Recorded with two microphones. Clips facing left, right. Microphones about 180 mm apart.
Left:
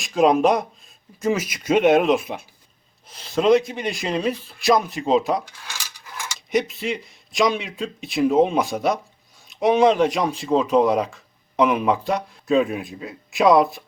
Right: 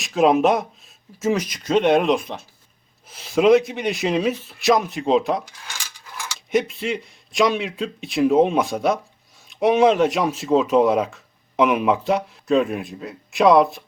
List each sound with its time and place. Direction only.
0.0 s speech: centre (ahead or behind)
3.1 s speech: 5° right (ahead or behind)